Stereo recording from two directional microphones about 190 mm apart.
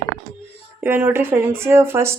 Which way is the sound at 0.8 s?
10° right (ahead or behind).